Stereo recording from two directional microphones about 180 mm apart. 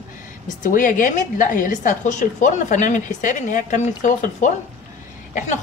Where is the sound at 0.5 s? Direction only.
50° left (ahead or behind).